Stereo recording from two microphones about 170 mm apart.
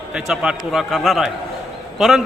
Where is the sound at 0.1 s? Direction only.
5° right (ahead or behind).